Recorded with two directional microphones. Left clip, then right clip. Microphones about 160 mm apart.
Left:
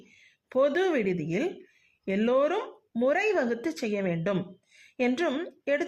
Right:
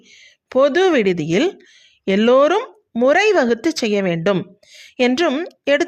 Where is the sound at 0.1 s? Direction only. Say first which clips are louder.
Right 11 dB; 40° right (ahead or behind).